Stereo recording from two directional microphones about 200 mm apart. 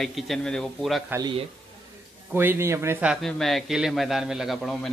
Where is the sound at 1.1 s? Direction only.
20° right (ahead or behind).